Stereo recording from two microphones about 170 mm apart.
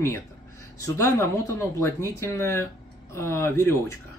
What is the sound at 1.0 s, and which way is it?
Speech, 15° left (ahead or behind).